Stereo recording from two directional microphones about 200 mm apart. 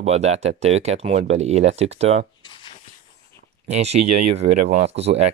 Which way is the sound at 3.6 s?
30° right (ahead or behind).